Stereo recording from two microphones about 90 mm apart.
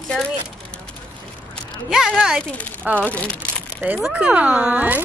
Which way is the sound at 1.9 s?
5° right (ahead or behind).